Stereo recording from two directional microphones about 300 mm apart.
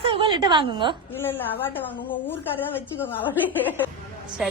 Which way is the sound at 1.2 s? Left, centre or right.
Centre.